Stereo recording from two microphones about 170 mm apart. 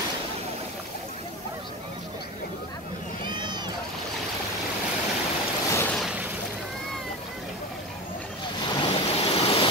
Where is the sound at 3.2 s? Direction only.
25° right (ahead or behind).